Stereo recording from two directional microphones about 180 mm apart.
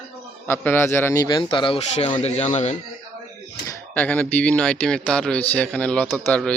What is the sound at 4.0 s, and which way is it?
A man's voice, 10° left (ahead or behind).